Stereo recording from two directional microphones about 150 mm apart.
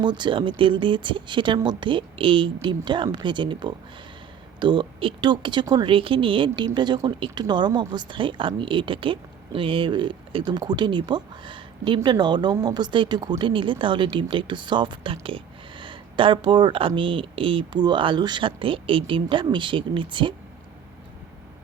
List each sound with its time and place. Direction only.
0.0 s speech: 30° right (ahead or behind)